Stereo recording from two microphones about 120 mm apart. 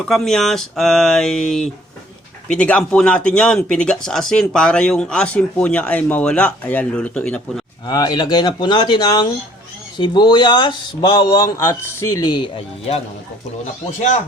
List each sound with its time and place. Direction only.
0.1 s speech: 5° left (ahead or behind)
7.9 s speech: 35° left (ahead or behind)